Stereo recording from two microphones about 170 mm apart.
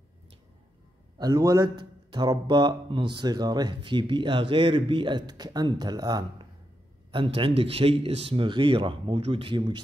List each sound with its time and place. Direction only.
1.1 s a man's voice: 25° right (ahead or behind)